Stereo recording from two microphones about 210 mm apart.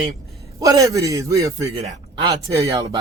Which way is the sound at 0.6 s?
15° right (ahead or behind).